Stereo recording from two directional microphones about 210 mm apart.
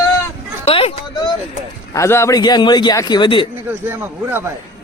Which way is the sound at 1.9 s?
15° left (ahead or behind).